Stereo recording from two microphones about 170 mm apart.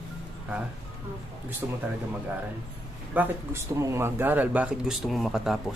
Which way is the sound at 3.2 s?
15° right (ahead or behind).